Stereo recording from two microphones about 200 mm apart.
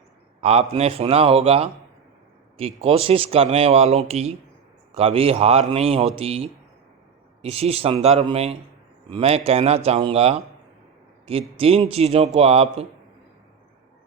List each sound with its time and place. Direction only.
0.4 s speech: 30° right (ahead or behind)